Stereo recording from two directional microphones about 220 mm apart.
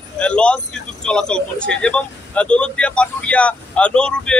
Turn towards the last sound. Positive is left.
turn(degrees=5)  # may be behind; listen again after turning